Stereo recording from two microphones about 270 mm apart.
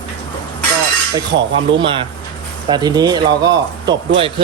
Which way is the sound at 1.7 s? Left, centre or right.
Centre.